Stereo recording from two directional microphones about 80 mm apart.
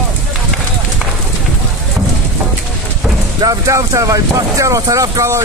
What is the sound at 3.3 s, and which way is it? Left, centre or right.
Speech, right.